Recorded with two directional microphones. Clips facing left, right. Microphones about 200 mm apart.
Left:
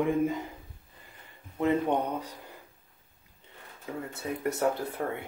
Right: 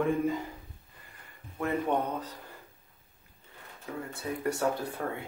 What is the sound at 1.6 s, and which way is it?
Speech, 15° left (ahead or behind).